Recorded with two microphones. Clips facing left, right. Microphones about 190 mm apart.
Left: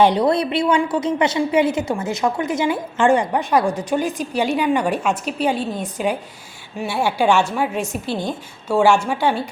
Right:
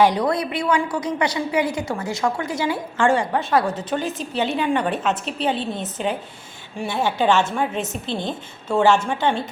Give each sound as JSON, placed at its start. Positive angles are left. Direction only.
{"t": 0.0, "sound": "a woman's voice", "side_deg": 25}